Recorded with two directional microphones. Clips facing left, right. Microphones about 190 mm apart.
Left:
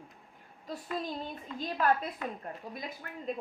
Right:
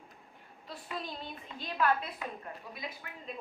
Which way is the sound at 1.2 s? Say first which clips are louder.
Left 5 dB; 40° left (ahead or behind).